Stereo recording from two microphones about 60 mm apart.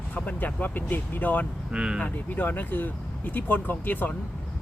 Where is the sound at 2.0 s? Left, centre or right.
Left.